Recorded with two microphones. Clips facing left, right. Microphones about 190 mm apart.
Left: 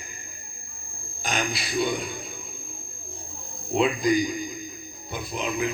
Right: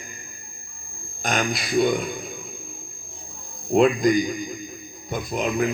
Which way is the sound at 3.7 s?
50° right (ahead or behind).